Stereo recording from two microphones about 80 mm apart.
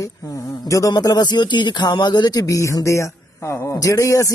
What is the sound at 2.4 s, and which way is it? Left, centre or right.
Speech, left.